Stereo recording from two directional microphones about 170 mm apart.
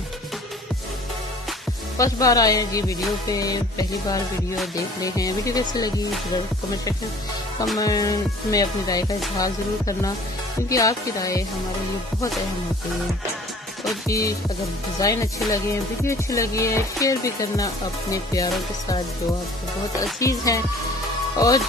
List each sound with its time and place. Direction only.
2.0 s music: 20° left (ahead or behind)
7.7 s music: 20° left (ahead or behind)
14.0 s music: 20° left (ahead or behind)
20.0 s music: 20° left (ahead or behind)